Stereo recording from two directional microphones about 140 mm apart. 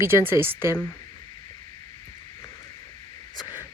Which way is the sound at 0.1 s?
25° left (ahead or behind).